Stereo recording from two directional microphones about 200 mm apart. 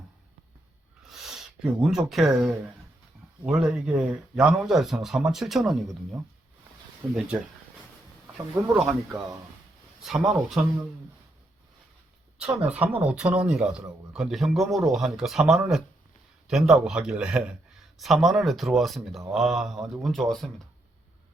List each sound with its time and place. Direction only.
1.1 s speech: centre (ahead or behind)
8.6 s speech: 5° right (ahead or behind)
9.1 s speech: 15° right (ahead or behind)
10.0 s speech: centre (ahead or behind)
12.4 s speech: 5° right (ahead or behind)